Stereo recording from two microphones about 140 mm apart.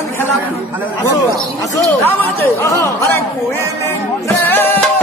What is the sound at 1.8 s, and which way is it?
Speech, 15° left (ahead or behind).